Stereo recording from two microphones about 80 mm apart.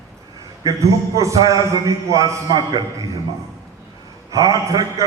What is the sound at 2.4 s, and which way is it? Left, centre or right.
Speech, right.